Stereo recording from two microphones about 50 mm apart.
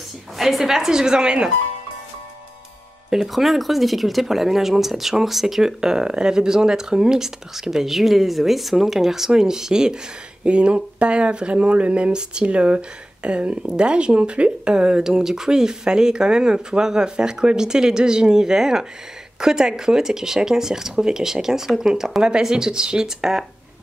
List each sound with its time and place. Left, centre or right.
0.4 s speech: centre
3.1 s speech: centre